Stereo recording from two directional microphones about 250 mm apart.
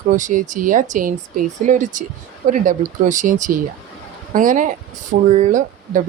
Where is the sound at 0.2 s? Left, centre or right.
Right.